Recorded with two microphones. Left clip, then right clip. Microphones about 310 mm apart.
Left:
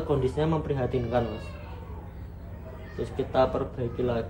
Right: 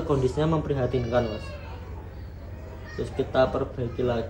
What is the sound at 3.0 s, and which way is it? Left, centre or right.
Speech, centre.